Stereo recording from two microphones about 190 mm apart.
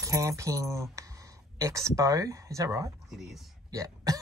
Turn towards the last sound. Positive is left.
turn(degrees=-20)  # may be behind; listen again after turning